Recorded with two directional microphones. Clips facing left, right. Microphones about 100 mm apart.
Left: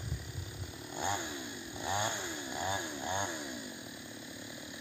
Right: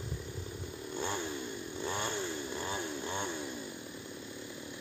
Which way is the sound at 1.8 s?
15° left (ahead or behind).